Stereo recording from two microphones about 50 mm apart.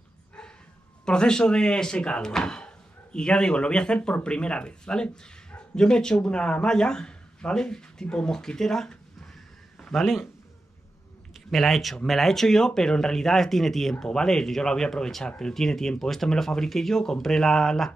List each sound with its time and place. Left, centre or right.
1.0 s speech: centre
11.5 s speech: centre